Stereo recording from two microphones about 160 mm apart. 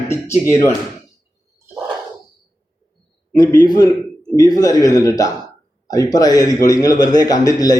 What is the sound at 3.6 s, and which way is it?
A man's voice, 25° left (ahead or behind).